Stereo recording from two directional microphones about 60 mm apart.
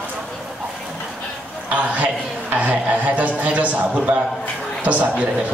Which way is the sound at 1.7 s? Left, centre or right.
Right.